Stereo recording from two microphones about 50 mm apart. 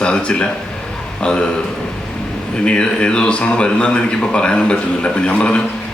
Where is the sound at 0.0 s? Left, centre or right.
Centre.